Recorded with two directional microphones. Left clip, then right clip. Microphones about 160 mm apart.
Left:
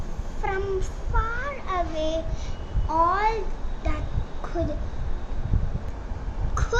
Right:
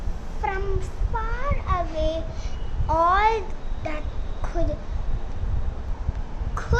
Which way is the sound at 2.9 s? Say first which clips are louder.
Right 3 dB; 30° right (ahead or behind).